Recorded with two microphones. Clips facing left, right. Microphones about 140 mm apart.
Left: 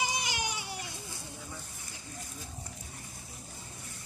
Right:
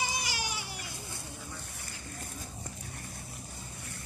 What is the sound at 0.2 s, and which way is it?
Baby cry, 20° left (ahead or behind).